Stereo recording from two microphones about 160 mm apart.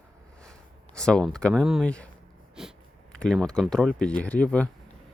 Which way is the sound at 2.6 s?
Centre (ahead or behind).